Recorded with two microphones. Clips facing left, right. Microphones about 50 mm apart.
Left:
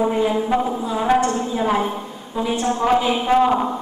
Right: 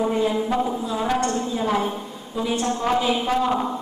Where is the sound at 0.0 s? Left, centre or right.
Centre.